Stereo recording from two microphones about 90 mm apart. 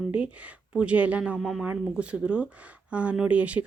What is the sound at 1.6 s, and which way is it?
Speech, 15° right (ahead or behind).